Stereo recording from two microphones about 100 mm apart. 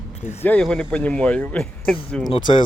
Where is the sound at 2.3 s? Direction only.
50° left (ahead or behind).